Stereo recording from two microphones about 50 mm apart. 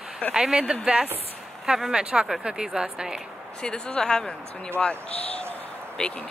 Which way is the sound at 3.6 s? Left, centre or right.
Centre.